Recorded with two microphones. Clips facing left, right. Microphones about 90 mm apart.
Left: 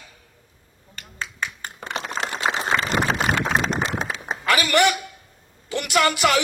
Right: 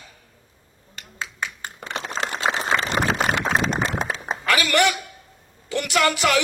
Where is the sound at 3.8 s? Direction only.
40° right (ahead or behind).